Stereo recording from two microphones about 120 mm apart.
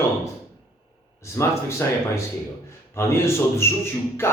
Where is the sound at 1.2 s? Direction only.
25° left (ahead or behind).